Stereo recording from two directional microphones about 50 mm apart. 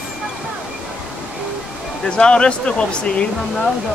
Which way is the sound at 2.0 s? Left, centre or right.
Centre.